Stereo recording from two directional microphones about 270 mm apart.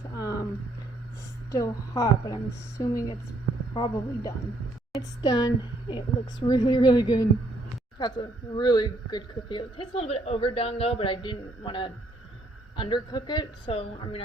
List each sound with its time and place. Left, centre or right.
0.2 s a sound: centre
1.5 s a woman's voice: centre
6.5 s a woman's voice: centre